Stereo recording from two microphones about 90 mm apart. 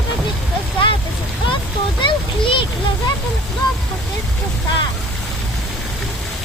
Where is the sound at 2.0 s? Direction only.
65° left (ahead or behind).